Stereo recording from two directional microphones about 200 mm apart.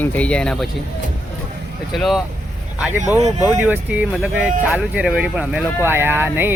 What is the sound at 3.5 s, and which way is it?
Speech, 5° right (ahead or behind).